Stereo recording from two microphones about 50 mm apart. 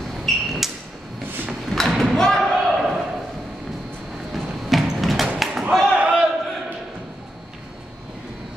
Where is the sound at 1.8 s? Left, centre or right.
Centre.